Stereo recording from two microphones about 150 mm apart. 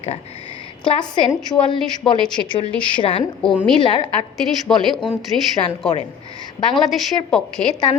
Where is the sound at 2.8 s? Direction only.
35° left (ahead or behind).